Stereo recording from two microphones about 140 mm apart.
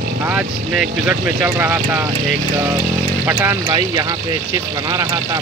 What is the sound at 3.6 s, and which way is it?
Speech, 30° right (ahead or behind).